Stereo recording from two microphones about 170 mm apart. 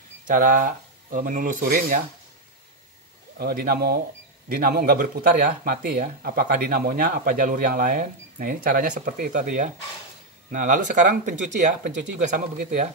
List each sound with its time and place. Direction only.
0.3 s speech: 50° right (ahead or behind)
3.3 s speech: 60° right (ahead or behind)